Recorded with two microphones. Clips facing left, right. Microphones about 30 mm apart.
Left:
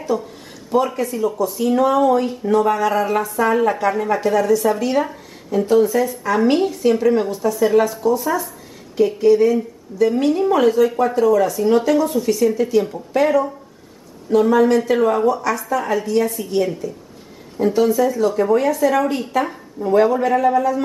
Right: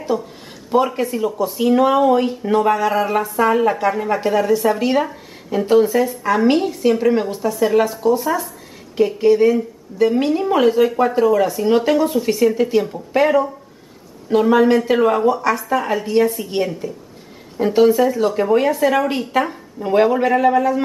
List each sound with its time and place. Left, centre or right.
0.1 s speech: centre
0.7 s a woman's voice: right
2.7 s speech: centre
4.2 s a woman's voice: right
5.9 s speech: centre
8.9 s a woman's voice: centre
14.5 s a woman's voice: right